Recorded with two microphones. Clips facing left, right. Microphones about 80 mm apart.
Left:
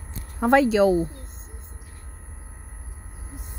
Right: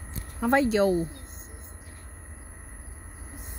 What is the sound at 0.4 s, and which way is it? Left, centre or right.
Speech, left.